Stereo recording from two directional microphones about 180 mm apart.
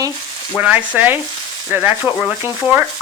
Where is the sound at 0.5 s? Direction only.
10° right (ahead or behind).